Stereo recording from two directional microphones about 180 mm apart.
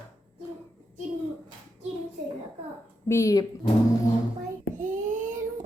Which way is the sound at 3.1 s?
15° left (ahead or behind).